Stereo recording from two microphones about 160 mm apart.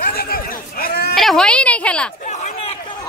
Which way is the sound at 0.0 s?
70° left (ahead or behind).